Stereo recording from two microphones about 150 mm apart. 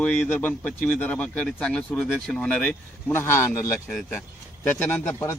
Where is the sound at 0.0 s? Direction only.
10° left (ahead or behind).